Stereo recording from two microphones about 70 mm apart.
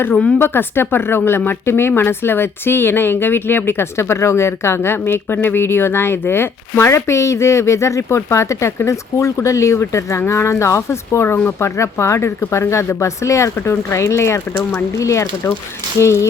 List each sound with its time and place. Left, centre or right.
0.3 s speech: left